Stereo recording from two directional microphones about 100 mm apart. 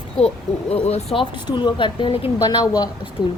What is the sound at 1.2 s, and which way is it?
Speech, 50° left (ahead or behind).